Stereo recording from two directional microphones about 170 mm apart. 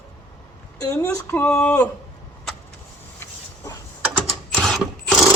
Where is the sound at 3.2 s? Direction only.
20° left (ahead or behind).